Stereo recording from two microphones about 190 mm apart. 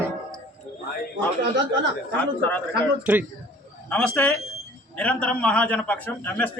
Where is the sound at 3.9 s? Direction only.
5° left (ahead or behind).